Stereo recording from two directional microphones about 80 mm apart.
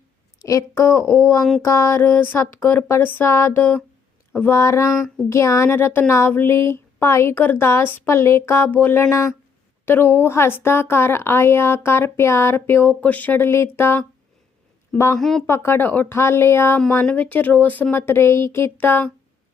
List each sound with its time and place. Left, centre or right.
0.3 s a sound: left
0.7 s speech: left
1.6 s a sound: left
4.5 s speech: left
9.8 s speech: left
15.2 s speech: centre
15.4 s speech: left
17.1 s a sound: centre
17.9 s speech: left